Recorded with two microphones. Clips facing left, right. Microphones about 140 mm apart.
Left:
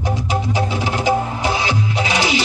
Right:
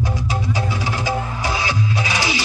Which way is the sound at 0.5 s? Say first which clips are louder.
Left 3 dB; 20° left (ahead or behind).